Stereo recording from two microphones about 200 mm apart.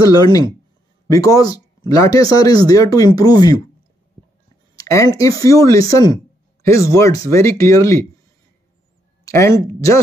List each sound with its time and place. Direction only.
0.0 s speech: 20° left (ahead or behind)
4.7 s speech: 15° left (ahead or behind)
9.2 s speech: 15° left (ahead or behind)